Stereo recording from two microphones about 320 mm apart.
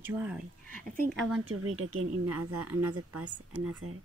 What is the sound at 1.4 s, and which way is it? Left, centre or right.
Speech, right.